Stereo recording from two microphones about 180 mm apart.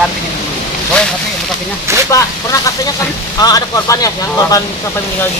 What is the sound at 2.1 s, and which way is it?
Speech, 20° left (ahead or behind).